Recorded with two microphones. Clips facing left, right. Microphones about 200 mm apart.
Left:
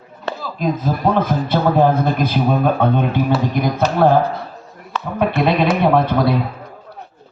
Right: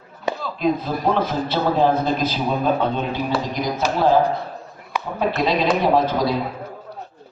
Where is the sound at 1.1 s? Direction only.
50° left (ahead or behind).